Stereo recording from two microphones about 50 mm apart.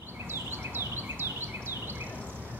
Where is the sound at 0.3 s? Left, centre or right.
Right.